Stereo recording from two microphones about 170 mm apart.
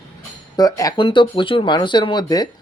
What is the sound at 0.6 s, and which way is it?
Speech, 20° left (ahead or behind).